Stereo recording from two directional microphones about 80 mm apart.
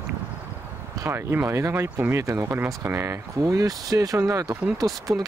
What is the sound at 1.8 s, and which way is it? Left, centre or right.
Speech, right.